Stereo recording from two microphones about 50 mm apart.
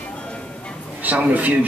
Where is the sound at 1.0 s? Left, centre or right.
Right.